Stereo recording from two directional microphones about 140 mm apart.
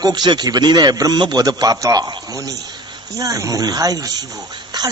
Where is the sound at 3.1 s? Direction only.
25° right (ahead or behind).